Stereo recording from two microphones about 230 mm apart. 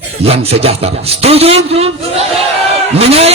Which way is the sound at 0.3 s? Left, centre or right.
Right.